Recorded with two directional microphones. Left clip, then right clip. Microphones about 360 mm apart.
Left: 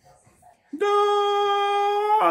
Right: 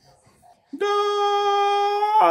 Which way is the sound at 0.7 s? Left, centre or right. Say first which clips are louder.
Left 1 dB; centre.